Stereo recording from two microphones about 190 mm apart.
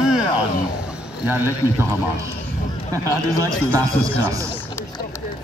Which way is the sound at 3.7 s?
15° right (ahead or behind).